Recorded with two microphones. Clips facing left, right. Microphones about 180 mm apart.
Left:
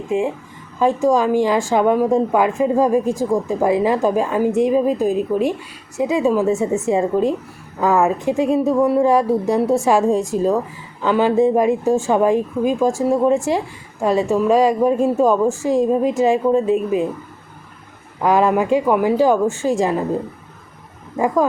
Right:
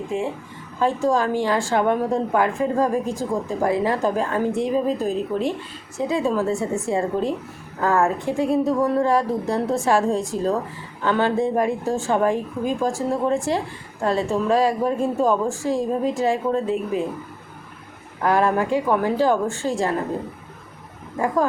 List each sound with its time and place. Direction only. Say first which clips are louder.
0.1 s a woman's voice: left 7 dB; 15° left (ahead or behind)
18.2 s a woman's voice: left 4 dB; 15° left (ahead or behind)